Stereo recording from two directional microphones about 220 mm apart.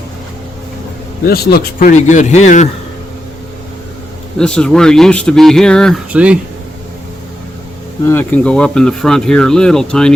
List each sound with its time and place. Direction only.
1.2 s a man's voice: 45° left (ahead or behind)
4.4 s speech: 5° left (ahead or behind)
8.0 s speech: 10° left (ahead or behind)